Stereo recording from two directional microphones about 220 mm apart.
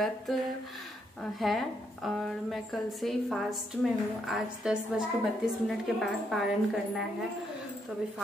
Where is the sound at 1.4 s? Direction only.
Centre (ahead or behind).